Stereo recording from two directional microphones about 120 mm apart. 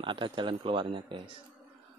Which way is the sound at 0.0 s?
45° right (ahead or behind).